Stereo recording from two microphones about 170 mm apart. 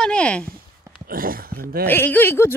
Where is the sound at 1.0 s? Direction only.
60° right (ahead or behind).